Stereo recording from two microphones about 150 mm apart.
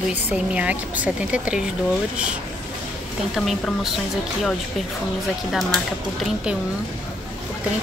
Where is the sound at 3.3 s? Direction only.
Centre (ahead or behind).